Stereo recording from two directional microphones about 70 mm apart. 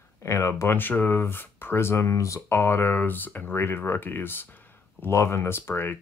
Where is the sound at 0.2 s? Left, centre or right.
Left.